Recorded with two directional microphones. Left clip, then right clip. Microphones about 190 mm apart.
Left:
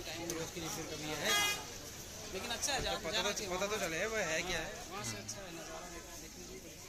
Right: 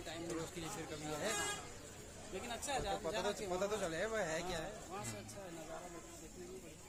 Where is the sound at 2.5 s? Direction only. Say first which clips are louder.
Left 4 dB; 40° right (ahead or behind).